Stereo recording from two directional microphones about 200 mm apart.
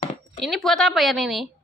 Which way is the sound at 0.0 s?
30° left (ahead or behind).